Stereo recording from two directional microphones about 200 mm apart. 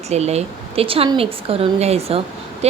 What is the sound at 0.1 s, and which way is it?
Speech, 35° right (ahead or behind).